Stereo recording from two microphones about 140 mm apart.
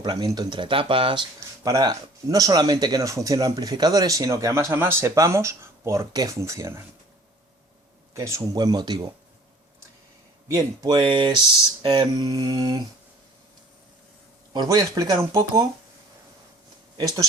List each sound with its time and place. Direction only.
0.0 s speech: 30° right (ahead or behind)
1.4 s speech: 25° right (ahead or behind)
8.1 s speech: 20° right (ahead or behind)
10.5 s speech: 30° right (ahead or behind)
14.5 s speech: 30° right (ahead or behind)